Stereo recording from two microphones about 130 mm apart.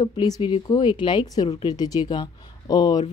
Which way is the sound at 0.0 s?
30° left (ahead or behind).